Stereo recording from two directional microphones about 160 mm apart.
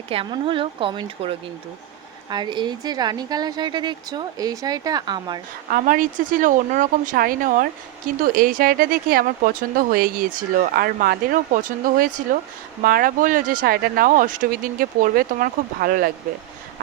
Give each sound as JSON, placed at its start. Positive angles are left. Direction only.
{"t": 0.1, "sound": "a woman's voice", "side_deg": -35}
{"t": 5.7, "sound": "speech", "side_deg": -60}